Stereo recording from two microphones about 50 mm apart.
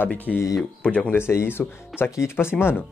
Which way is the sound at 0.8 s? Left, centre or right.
Left.